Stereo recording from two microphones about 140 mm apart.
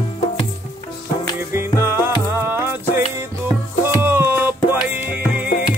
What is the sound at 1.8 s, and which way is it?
Music, 15° right (ahead or behind).